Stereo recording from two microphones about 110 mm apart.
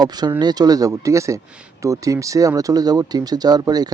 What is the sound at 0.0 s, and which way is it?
Speech, 40° right (ahead or behind).